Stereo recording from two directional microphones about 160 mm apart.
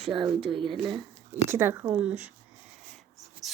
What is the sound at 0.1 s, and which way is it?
Speech, 35° right (ahead or behind).